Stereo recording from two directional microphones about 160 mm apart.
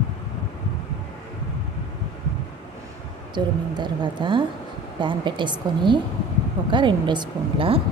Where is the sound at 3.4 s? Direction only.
30° right (ahead or behind).